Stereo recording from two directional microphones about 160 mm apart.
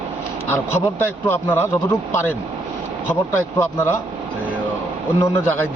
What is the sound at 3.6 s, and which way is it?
Speech, 15° left (ahead or behind).